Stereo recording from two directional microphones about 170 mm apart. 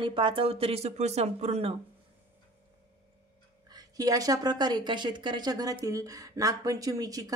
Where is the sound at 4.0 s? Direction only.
20° right (ahead or behind).